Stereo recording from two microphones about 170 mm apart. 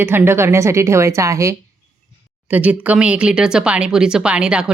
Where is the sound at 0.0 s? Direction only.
15° right (ahead or behind).